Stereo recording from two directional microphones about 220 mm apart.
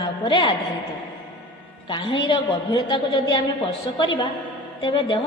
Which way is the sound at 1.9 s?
25° left (ahead or behind).